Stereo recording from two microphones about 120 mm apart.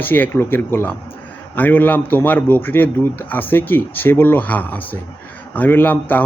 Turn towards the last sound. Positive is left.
turn(degrees=15)  # may be behind; listen again after turning